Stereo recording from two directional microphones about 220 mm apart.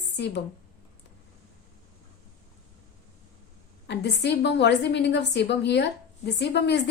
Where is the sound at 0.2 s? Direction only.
50° left (ahead or behind).